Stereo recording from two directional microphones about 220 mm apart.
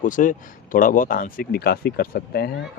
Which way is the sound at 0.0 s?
35° left (ahead or behind).